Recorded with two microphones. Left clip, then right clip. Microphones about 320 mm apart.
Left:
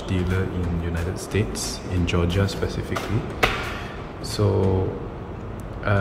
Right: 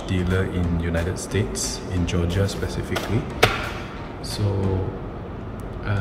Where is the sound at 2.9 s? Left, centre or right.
Right.